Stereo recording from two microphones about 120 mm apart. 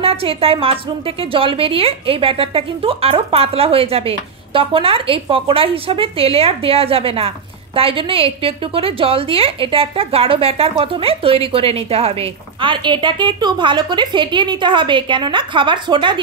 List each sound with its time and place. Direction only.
0.0 s a woman's voice: 55° right (ahead or behind)